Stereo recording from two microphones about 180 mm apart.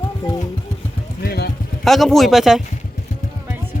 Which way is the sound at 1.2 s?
60° left (ahead or behind).